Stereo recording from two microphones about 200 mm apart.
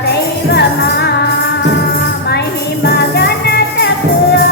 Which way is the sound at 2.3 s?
55° left (ahead or behind).